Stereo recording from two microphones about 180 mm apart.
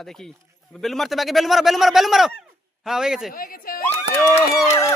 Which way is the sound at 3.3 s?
55° left (ahead or behind).